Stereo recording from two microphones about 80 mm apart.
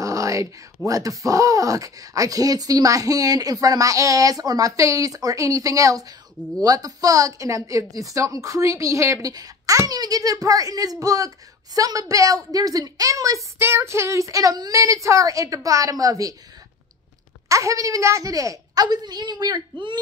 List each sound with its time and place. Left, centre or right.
0.0 s a sound: right
0.8 s speech: right
9.3 s a child's voice: right
13.6 s speech: right
17.5 s speech: right
18.9 s a woman's voice: right